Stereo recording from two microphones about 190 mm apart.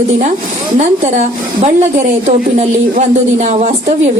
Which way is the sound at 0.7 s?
35° right (ahead or behind).